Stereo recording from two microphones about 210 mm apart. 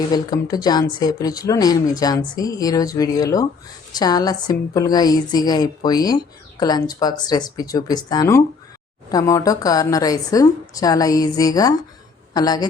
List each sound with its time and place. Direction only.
0.1 s a woman's voice: 20° left (ahead or behind)